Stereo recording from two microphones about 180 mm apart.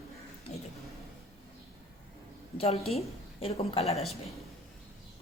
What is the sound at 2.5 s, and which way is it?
Speech, 35° left (ahead or behind).